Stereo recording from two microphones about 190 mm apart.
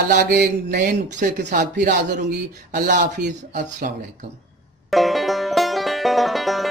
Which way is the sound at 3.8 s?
45° right (ahead or behind).